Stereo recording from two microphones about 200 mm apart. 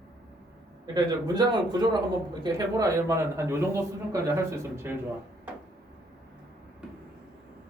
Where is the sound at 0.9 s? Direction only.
20° right (ahead or behind).